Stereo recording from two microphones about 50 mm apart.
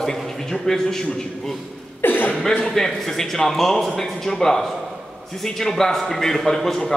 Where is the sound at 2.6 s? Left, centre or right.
Centre.